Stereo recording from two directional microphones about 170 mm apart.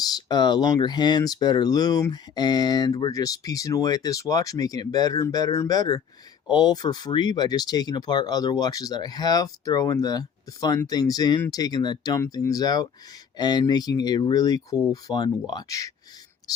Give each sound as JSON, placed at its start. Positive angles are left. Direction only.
{"t": 0.0, "sound": "speech", "side_deg": 25}